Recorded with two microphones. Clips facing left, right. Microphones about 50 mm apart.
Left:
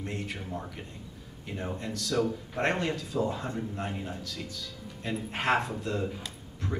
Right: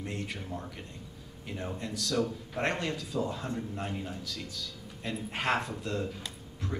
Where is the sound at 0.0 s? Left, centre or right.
Centre.